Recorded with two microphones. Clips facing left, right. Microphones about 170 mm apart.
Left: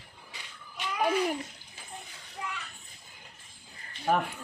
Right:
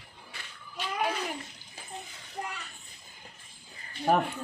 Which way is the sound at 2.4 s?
50° right (ahead or behind).